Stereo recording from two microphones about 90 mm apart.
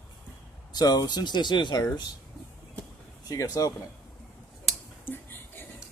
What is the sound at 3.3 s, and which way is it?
Speech, 45° left (ahead or behind).